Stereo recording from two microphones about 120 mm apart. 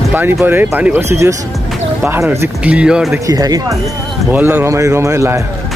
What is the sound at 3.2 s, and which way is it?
Speech, 30° right (ahead or behind).